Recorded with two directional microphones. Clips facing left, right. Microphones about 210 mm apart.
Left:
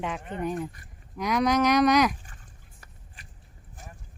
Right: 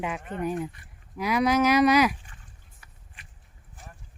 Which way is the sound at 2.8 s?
40° left (ahead or behind).